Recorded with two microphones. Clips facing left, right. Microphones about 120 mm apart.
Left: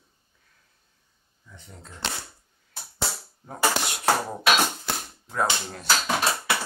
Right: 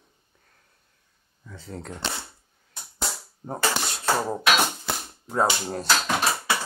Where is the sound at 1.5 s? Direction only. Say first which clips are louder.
Right 10 dB; 85° right.